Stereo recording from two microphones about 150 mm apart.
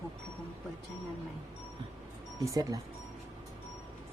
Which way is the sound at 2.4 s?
25° right (ahead or behind).